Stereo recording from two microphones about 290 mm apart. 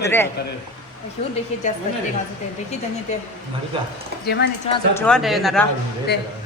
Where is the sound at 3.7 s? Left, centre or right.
Centre.